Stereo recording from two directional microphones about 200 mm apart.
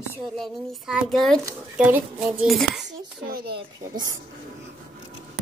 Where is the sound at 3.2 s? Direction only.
50° right (ahead or behind).